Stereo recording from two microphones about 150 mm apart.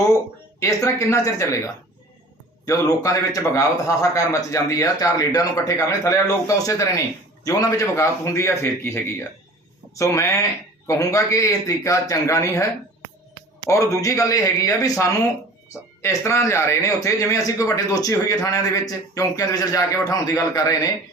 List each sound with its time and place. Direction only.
0.9 s speech: 20° left (ahead or behind)
13.7 s speech: 20° left (ahead or behind)